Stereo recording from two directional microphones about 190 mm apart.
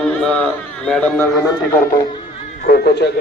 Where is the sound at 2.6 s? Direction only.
55° left (ahead or behind).